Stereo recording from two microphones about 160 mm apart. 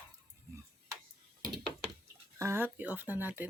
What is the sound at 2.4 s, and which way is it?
Speech, 15° right (ahead or behind).